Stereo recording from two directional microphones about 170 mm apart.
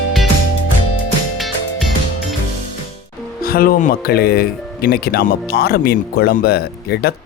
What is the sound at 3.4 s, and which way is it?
Speech, 60° left (ahead or behind).